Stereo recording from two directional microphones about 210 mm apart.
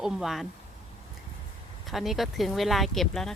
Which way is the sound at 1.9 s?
Centre (ahead or behind).